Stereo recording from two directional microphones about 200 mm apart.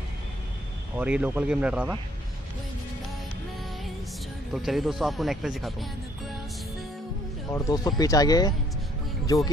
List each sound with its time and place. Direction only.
0.9 s speech: 10° right (ahead or behind)
4.6 s speech: centre (ahead or behind)
7.5 s speech: 15° left (ahead or behind)